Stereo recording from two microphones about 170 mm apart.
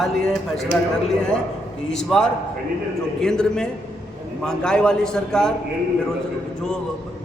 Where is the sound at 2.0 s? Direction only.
5° left (ahead or behind).